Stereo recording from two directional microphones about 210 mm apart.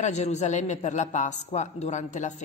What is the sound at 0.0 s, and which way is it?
A man's voice, 35° left (ahead or behind).